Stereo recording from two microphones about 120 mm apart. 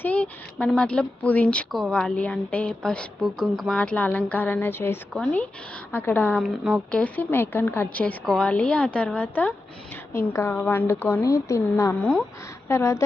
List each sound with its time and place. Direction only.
0.0 s speech: 10° left (ahead or behind)
6.4 s speech: centre (ahead or behind)
7.0 s a woman's voice: 15° left (ahead or behind)